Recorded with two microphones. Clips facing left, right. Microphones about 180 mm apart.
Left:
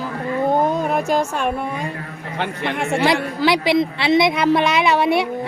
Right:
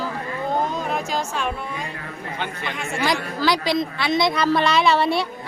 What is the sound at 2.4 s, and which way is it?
Speech, 65° left (ahead or behind).